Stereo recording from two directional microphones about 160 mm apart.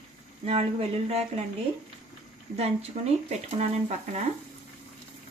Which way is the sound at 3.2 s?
40° right (ahead or behind).